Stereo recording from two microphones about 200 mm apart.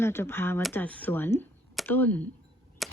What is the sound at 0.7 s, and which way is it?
Speech, 10° left (ahead or behind).